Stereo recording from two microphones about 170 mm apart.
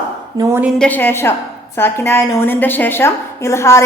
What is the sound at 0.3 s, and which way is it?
Speech, 20° right (ahead or behind).